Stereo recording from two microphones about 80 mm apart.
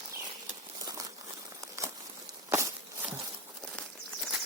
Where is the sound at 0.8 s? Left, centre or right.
Right.